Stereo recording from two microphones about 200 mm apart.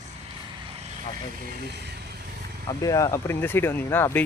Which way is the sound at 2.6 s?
15° left (ahead or behind).